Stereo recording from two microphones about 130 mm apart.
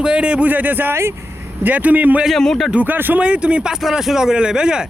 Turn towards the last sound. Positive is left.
turn(degrees=-5)  # may be behind; listen again after turning